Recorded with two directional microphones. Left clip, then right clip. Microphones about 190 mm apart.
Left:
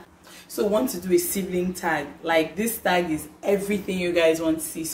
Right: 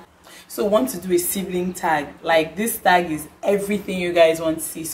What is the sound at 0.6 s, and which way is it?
A woman's voice, 10° right (ahead or behind).